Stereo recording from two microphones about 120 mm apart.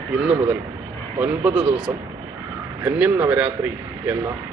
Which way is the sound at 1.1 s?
15° right (ahead or behind).